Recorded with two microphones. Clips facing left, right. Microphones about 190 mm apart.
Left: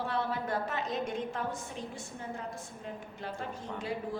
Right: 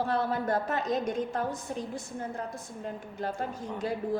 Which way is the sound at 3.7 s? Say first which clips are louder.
Right 6 dB; 45° right (ahead or behind).